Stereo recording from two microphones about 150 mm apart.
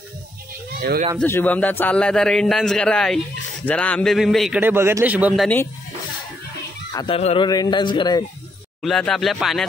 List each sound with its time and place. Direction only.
0.7 s speech: 70° right (ahead or behind)
1.2 s a man's voice: 10° left (ahead or behind)
4.6 s a man's voice: 15° right (ahead or behind)
6.9 s a sound: 30° left (ahead or behind)
7.2 s a man's voice: 45° left (ahead or behind)
7.4 s a man's voice: 25° left (ahead or behind)
8.8 s a man's voice: 5° left (ahead or behind)